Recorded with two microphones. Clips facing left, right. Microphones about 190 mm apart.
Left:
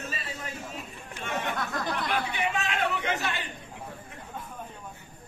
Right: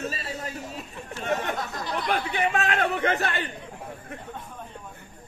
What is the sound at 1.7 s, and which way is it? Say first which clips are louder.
Chatter: even; 50° left (ahead or behind).